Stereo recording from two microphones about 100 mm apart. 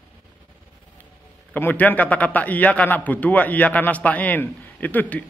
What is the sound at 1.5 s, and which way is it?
A man's voice, 15° left (ahead or behind).